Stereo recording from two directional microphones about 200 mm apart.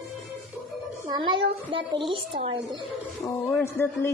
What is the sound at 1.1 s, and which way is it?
Child singing, 25° right (ahead or behind).